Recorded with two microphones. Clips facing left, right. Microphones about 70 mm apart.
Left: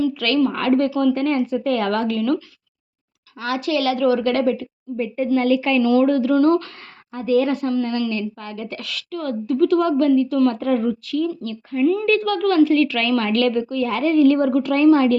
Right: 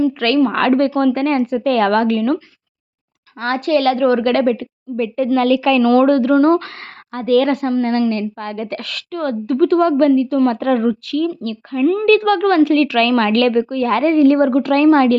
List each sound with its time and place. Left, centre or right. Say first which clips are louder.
0.2 s speech: right 4 dB; right
0.5 s a woman's voice: right 4 dB; right
3.4 s speech: right 5 dB; right
4.9 s a woman's voice: right 4 dB; right
5.8 s a woman's voice: right 4 dB; right
6.3 s speech: right 2 dB; right
7.1 s a woman's voice: right 4 dB; right
7.7 s speech: right 5 dB; right
10.6 s a woman's voice: right 4 dB; right